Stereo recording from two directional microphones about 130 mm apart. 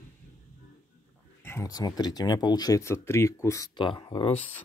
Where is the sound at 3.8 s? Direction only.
35° left (ahead or behind).